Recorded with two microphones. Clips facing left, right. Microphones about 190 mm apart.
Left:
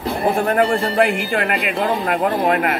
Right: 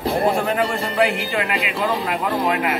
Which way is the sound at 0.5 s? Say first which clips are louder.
Left 5 dB; 50° left (ahead or behind).